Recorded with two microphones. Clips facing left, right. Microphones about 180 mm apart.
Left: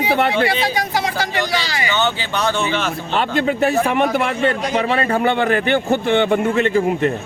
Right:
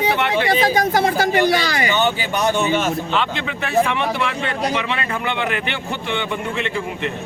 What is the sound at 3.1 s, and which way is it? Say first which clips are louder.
A man's voice: left 4 dB; 45° left (ahead or behind).